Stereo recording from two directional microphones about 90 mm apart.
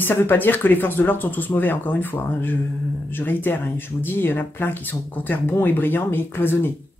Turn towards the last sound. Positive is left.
turn(degrees=25)  # may be behind; listen again after turning